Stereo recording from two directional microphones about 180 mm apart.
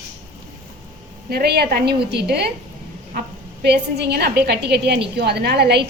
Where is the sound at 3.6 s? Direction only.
65° right (ahead or behind).